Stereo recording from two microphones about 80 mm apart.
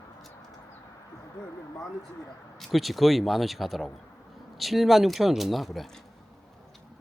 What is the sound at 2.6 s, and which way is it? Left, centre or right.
Speech, centre.